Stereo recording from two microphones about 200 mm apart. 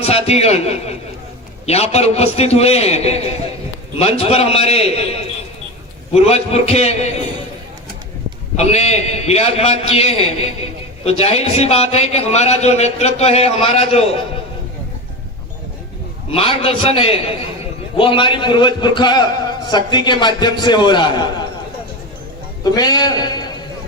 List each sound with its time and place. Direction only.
0.0 s a man's voice: 30° left (ahead or behind)
6.1 s a man's voice: 30° left (ahead or behind)
8.5 s a man's voice: 35° left (ahead or behind)
16.3 s a man's voice: 30° left (ahead or behind)
22.6 s a man's voice: 20° left (ahead or behind)